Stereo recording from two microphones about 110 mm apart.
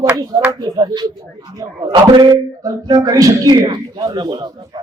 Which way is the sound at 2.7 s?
35° right (ahead or behind).